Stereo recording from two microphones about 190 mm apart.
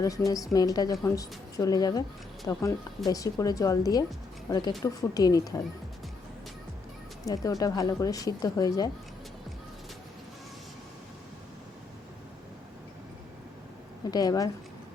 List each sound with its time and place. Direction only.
0.5 s speech: 20° left (ahead or behind)
7.3 s speech: 20° left (ahead or behind)
14.1 s speech: 20° left (ahead or behind)